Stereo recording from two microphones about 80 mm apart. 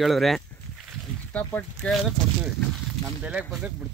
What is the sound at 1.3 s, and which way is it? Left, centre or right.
Speech, left.